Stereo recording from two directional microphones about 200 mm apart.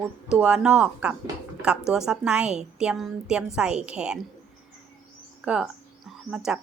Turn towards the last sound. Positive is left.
turn(degrees=-5)  # may be behind; listen again after turning